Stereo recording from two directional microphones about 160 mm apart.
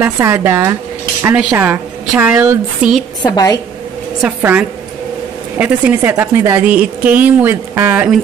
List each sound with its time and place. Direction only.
0.0 s a woman's voice: 15° right (ahead or behind)
3.3 s a woman's voice: 20° left (ahead or behind)
4.2 s a woman's voice: 10° right (ahead or behind)